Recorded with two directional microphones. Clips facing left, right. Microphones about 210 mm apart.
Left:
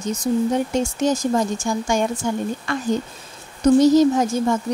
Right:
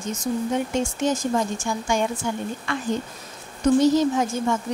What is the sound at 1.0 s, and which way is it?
Speech, 40° left (ahead or behind).